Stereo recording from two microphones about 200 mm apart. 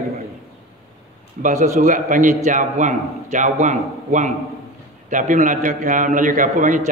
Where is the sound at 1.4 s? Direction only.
40° right (ahead or behind).